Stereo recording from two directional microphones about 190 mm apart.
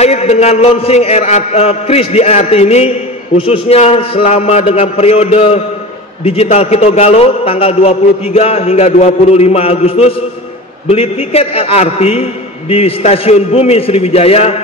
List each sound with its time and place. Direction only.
0.0 s a man's voice: 35° left (ahead or behind)